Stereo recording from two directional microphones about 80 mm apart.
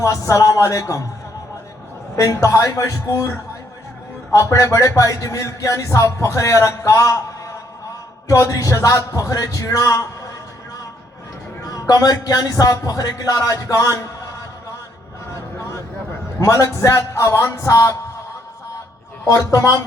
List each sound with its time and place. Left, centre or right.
0.0 s speech: left
2.1 s speech: left
11.6 s speech: left
15.4 s vehicle: left
16.4 s speech: left
19.4 s speech: left